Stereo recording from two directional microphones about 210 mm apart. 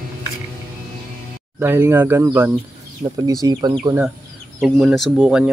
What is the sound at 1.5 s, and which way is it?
Speech, 10° right (ahead or behind).